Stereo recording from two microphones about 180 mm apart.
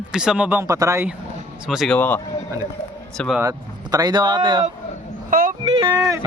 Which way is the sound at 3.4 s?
20° right (ahead or behind).